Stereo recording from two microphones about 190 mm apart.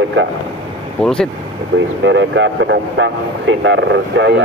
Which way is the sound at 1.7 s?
70° right (ahead or behind).